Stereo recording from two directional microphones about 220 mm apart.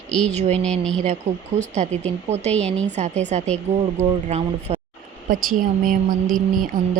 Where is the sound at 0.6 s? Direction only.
5° left (ahead or behind).